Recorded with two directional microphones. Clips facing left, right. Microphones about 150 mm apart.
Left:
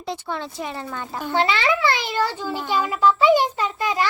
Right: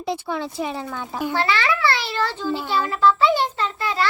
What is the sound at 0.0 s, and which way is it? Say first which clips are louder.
Speech: right 3 dB; 10° right (ahead or behind).